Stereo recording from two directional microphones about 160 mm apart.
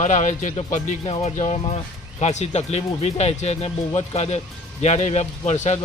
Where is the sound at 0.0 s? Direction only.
50° left (ahead or behind).